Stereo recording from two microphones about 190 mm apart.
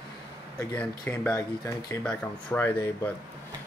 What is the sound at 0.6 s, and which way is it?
Speech, 10° left (ahead or behind).